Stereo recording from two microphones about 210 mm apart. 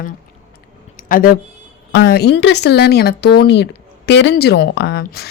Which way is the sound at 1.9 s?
50° left (ahead or behind).